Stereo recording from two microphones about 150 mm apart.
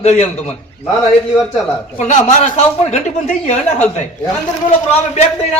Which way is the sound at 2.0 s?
50° left (ahead or behind).